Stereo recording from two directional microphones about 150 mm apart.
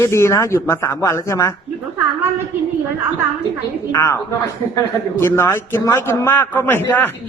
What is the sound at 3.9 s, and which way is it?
Speech, 20° left (ahead or behind).